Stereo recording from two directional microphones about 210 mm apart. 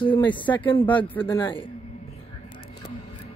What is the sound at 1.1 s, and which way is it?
Speech, 5° left (ahead or behind).